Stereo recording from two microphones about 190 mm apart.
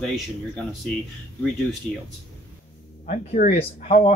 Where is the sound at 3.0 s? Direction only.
45° left (ahead or behind).